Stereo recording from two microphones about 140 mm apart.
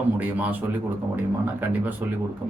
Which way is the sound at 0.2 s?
10° right (ahead or behind).